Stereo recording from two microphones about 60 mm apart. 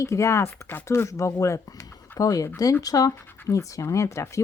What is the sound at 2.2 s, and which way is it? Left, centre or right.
Speech, left.